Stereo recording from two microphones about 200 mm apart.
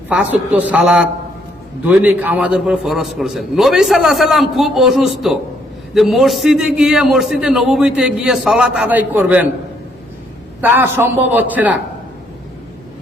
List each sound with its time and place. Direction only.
0.1 s a man's voice: 5° right (ahead or behind)
10.6 s a man's voice: 10° right (ahead or behind)